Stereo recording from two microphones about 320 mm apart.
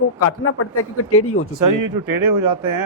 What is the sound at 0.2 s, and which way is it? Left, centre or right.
Speech, left.